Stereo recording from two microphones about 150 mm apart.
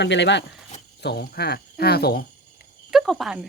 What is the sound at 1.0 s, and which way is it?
Speech, 90° left.